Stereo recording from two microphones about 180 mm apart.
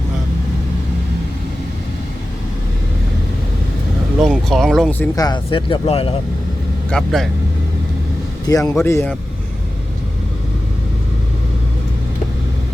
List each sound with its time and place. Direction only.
4.2 s speech: centre (ahead or behind)
5.1 s speech: 20° left (ahead or behind)
6.9 s speech: centre (ahead or behind)
8.4 s a man's voice: 20° left (ahead or behind)